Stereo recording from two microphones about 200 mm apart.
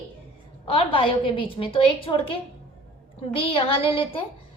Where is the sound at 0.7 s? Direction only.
25° left (ahead or behind).